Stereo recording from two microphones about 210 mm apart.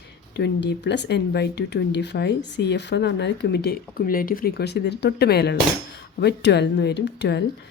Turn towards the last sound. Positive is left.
turn(degrees=55)  # may be behind; listen again after turning